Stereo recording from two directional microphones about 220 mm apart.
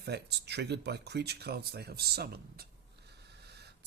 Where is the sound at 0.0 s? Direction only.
50° right (ahead or behind).